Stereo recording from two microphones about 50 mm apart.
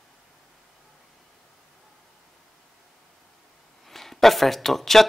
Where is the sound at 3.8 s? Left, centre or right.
Centre.